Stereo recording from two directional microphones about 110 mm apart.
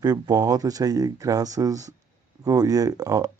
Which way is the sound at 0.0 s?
35° right (ahead or behind).